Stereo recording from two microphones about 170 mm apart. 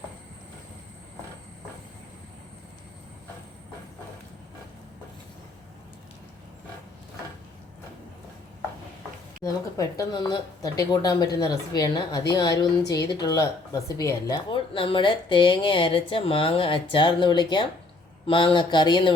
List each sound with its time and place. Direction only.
9.4 s a woman's voice: 20° left (ahead or behind)